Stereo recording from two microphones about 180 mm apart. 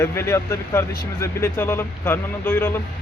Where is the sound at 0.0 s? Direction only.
15° left (ahead or behind).